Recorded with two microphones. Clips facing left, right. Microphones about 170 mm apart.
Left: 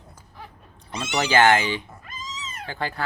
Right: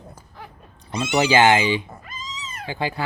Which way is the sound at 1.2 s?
15° right (ahead or behind).